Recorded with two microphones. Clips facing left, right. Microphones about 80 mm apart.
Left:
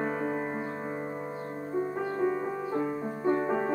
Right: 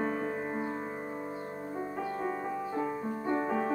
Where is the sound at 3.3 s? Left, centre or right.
Centre.